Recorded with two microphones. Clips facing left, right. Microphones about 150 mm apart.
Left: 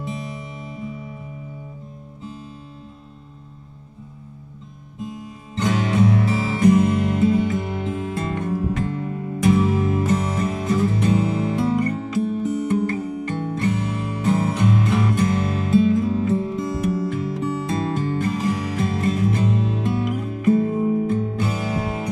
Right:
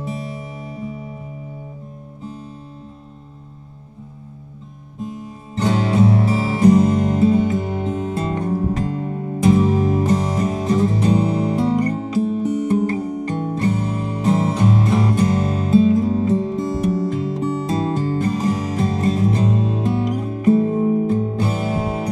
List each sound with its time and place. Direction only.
5.6 s music: 35° right (ahead or behind)